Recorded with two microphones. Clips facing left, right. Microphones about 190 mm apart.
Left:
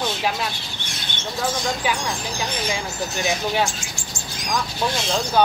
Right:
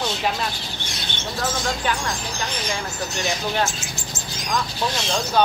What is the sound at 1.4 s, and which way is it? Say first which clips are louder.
Speech: left 1 dB; 15° left (ahead or behind).